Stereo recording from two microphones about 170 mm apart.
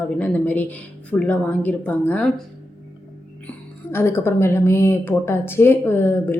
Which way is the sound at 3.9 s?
15° left (ahead or behind).